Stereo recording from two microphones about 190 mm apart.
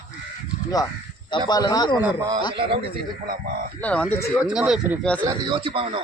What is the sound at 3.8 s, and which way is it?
Speech, 5° left (ahead or behind).